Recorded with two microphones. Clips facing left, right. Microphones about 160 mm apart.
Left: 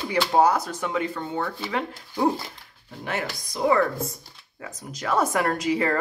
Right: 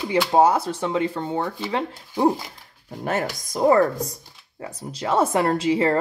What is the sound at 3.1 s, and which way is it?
Speech, 45° right (ahead or behind).